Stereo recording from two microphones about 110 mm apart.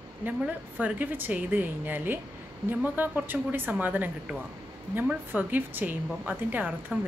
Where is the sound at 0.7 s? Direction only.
15° right (ahead or behind).